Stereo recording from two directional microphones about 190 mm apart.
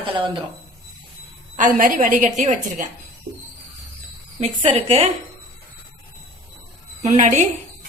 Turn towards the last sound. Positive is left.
turn(degrees=-40)  # may be behind; listen again after turning